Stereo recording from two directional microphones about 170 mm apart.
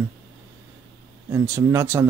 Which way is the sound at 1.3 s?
15° right (ahead or behind).